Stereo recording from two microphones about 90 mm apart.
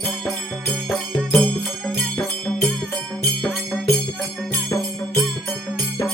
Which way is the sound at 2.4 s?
5° left (ahead or behind).